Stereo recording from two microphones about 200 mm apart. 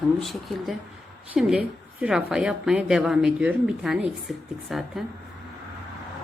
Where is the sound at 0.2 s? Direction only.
Centre (ahead or behind).